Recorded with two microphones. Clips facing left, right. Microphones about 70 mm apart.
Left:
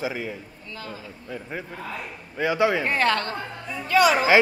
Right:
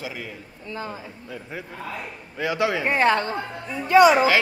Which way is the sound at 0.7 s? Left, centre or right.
Right.